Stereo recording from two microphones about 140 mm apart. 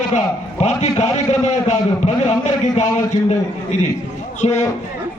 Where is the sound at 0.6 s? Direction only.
55° left (ahead or behind).